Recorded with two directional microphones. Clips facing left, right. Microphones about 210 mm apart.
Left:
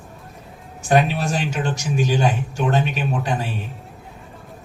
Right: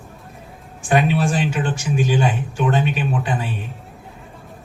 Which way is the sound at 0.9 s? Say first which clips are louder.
Right 1 dB; 40° left (ahead or behind).